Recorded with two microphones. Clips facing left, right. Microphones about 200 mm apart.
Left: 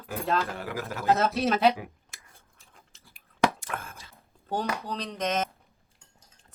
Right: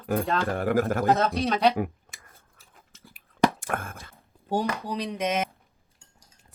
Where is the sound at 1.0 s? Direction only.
Centre (ahead or behind).